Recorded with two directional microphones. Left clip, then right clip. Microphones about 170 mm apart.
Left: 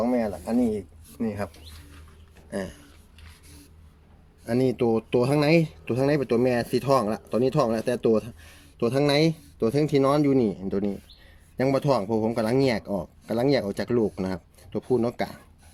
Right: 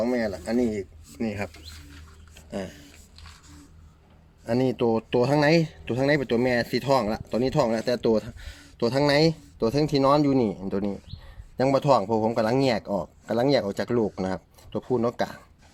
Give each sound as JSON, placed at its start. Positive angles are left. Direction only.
{"t": 0.0, "sound": "speech", "side_deg": 0}
{"t": 2.5, "sound": "a sound", "side_deg": 30}
{"t": 4.4, "sound": "speech", "side_deg": 15}